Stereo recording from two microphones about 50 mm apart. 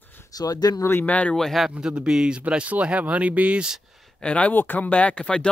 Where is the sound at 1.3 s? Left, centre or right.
Centre.